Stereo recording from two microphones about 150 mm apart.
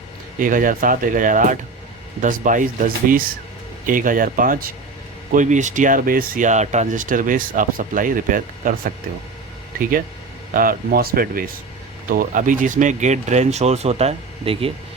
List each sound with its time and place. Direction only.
0.3 s speech: 65° right (ahead or behind)
5.3 s speech: 55° right (ahead or behind)
10.5 s speech: 70° right (ahead or behind); by 14.7 s 40° right (ahead or behind)